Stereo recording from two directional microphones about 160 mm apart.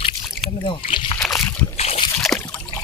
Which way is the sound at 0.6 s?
35° left (ahead or behind).